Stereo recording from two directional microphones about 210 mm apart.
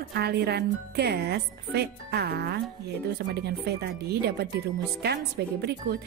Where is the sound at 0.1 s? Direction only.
50° right (ahead or behind).